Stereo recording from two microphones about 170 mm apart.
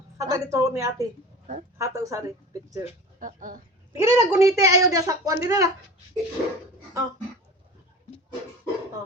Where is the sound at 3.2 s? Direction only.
55° right (ahead or behind).